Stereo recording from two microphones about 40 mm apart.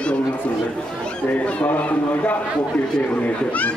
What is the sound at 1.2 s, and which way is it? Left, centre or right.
A man's voice, left.